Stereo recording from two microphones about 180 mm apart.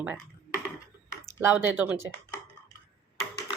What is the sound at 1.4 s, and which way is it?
Speech, 10° right (ahead or behind).